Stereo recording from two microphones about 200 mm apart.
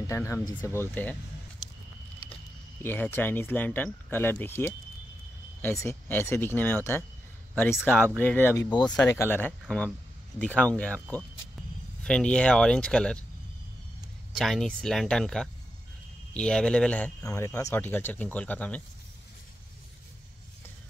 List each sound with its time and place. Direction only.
0.0 s speech: 15° left (ahead or behind)
2.8 s speech: 10° left (ahead or behind)
14.4 s speech: centre (ahead or behind)